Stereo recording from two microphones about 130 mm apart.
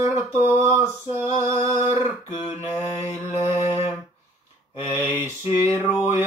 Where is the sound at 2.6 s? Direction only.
60° left (ahead or behind).